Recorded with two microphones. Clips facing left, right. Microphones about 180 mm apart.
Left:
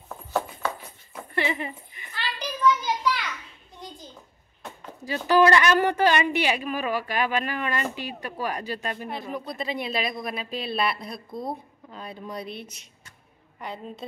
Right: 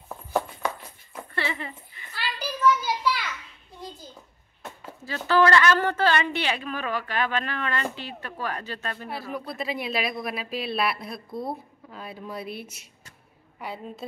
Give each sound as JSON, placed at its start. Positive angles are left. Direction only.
{"t": 0.1, "sound": "clip-clop", "side_deg": -15}
{"t": 1.3, "sound": "dog", "side_deg": 20}
{"t": 2.1, "sound": "a sound", "side_deg": -5}
{"t": 5.0, "sound": "a woman's voice", "side_deg": 15}
{"t": 9.3, "sound": "a woman's voice", "side_deg": -5}